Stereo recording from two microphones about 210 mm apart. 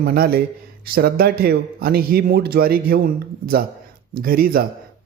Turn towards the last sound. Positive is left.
turn(degrees=-45)  # may be behind; listen again after turning